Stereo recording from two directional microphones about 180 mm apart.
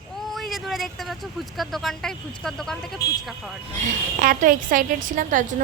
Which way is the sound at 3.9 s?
50° right (ahead or behind).